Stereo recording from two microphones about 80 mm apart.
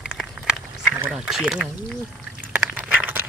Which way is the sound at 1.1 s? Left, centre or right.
Centre.